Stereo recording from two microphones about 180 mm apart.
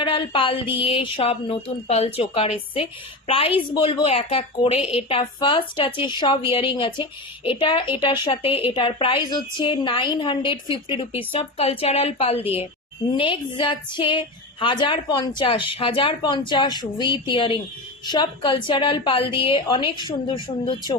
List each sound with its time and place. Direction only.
0.0 s a woman's voice: 30° left (ahead or behind)